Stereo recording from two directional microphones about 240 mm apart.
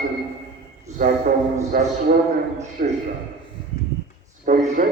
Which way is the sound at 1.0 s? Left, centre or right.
Right.